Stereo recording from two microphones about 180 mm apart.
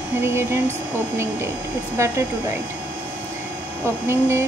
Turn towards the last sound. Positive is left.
turn(degrees=-15)  # may be behind; listen again after turning